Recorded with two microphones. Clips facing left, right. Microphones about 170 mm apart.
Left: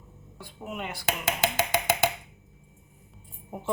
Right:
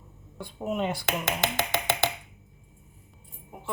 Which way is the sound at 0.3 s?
30° right (ahead or behind).